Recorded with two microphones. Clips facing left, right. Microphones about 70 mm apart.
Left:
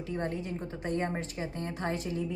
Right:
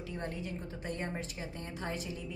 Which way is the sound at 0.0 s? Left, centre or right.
Left.